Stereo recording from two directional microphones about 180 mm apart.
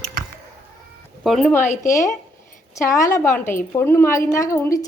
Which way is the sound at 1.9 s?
15° left (ahead or behind).